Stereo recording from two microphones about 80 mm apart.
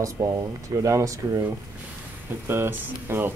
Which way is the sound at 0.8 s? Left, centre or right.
Right.